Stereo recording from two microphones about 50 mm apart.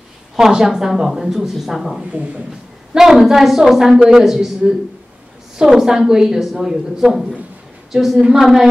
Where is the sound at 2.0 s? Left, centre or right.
Right.